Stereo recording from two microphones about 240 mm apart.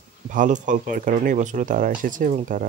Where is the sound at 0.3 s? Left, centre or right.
Right.